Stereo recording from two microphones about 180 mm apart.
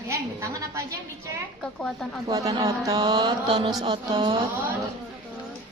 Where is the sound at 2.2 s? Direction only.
20° right (ahead or behind).